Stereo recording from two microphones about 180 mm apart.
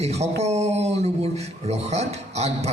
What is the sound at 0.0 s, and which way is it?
A man's voice, 35° right (ahead or behind).